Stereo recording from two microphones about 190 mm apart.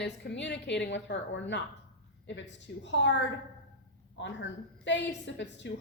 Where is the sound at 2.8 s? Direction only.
70° left (ahead or behind).